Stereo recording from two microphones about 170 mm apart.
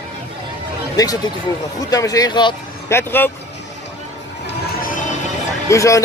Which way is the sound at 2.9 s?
15° left (ahead or behind).